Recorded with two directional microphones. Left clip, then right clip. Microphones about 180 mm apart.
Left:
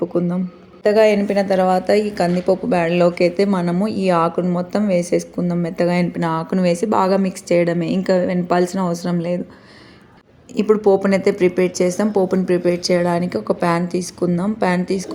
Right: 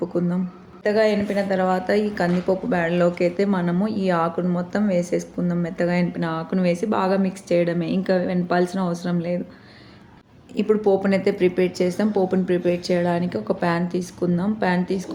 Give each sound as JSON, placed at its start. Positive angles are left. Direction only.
{"t": 0.0, "sound": "a sound", "side_deg": 15}
{"t": 0.9, "sound": "a woman's voice", "side_deg": 35}
{"t": 10.6, "sound": "a woman's voice", "side_deg": 25}